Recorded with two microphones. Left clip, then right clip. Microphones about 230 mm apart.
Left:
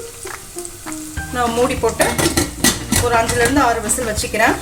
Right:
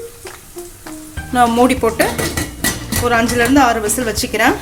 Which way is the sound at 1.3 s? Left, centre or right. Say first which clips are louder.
Right 5 dB; right.